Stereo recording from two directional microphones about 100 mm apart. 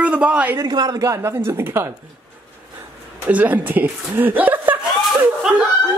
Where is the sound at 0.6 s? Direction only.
40° right (ahead or behind).